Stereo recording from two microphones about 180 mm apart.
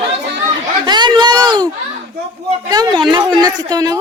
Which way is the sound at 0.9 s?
25° right (ahead or behind).